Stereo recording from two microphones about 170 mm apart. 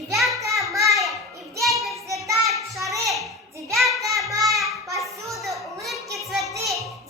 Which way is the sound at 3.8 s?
Centre (ahead or behind).